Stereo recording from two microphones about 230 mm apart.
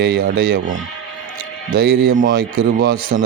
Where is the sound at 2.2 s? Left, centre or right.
Right.